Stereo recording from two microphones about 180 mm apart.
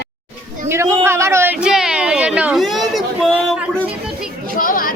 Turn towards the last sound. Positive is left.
turn(degrees=50)  # may be behind; listen again after turning